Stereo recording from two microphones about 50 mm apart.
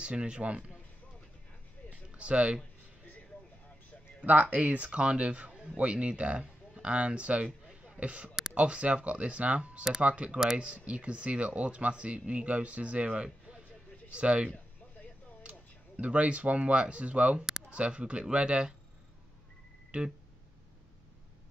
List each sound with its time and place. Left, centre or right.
0.0 s speech: right
1.9 s a sound: right
4.2 s speech: right
7.8 s a sound: right
8.5 s speech: right
16.0 s speech: right
19.9 s speech: right